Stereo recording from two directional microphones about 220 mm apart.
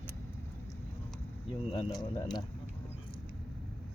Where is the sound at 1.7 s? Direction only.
20° left (ahead or behind).